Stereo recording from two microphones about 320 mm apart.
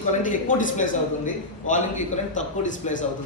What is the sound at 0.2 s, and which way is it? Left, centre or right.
A man's voice, left.